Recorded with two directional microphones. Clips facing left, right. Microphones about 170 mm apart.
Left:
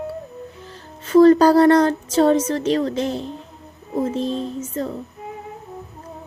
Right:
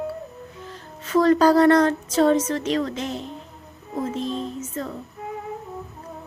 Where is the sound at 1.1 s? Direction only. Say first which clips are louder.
Left 5 dB; 35° left (ahead or behind).